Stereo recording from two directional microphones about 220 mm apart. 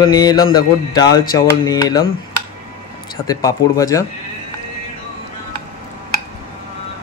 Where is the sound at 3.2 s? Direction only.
15° left (ahead or behind).